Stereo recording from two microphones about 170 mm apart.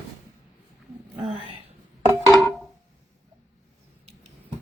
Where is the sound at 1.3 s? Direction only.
35° right (ahead or behind).